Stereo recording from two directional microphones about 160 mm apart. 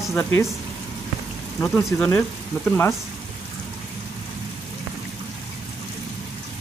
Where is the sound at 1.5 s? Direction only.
10° left (ahead or behind).